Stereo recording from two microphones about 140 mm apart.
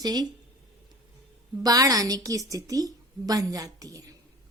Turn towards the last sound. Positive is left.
turn(degrees=-25)  # may be behind; listen again after turning